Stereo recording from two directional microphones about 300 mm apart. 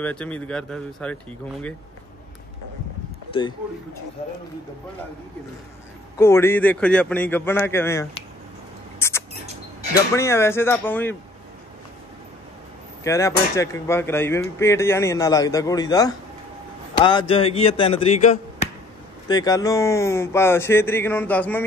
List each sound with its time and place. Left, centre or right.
0.0 s speech: centre
6.1 s speech: centre
9.0 s rodents: centre
10.1 s speech: centre
13.0 s a man's voice: centre